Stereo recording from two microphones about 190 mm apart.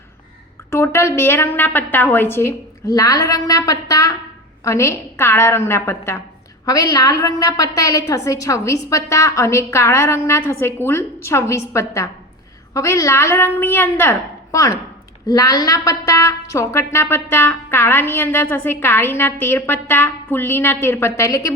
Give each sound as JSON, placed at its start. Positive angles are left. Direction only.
{"t": 0.7, "sound": "a woman's voice", "side_deg": 15}